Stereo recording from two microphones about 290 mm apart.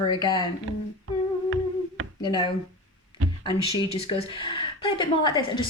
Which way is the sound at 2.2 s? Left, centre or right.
Centre.